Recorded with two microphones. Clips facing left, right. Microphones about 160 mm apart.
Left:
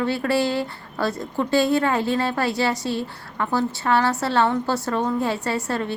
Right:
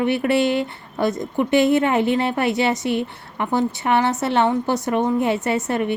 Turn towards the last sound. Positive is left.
turn(degrees=-20)  # may be behind; listen again after turning